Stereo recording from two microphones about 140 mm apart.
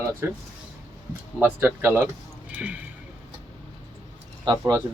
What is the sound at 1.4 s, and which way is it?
Speech, 15° right (ahead or behind).